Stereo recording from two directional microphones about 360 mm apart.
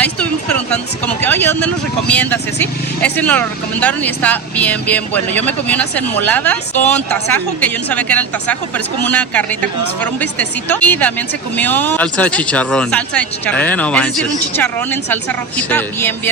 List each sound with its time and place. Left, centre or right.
0.0 s speech: centre